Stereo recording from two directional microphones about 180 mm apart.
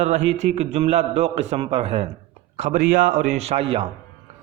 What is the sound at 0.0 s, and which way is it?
A man's voice, 40° right (ahead or behind).